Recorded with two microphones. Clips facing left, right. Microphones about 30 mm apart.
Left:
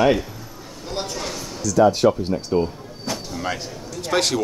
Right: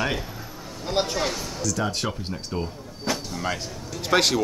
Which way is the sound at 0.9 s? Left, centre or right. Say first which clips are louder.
Right 4 dB; centre.